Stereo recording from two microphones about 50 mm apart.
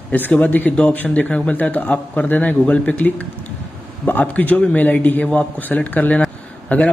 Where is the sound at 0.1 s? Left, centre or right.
Left.